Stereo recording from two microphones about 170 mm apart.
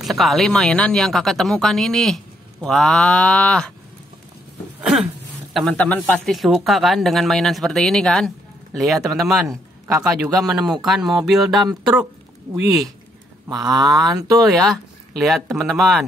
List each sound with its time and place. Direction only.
0.0 s speech: centre (ahead or behind)
5.5 s speech: centre (ahead or behind)
13.5 s speech: 25° right (ahead or behind)
14.4 s speech: centre (ahead or behind)